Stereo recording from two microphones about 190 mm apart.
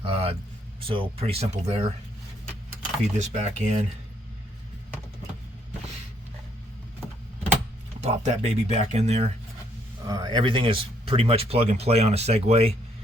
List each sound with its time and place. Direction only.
0.0 s a sound: 30° right (ahead or behind)
0.8 s speech: 30° right (ahead or behind)
3.2 s speech: 40° right (ahead or behind)
8.0 s speech: 35° right (ahead or behind)
10.1 s speech: 20° right (ahead or behind)